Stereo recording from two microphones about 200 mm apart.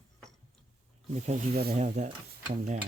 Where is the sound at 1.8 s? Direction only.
40° right (ahead or behind).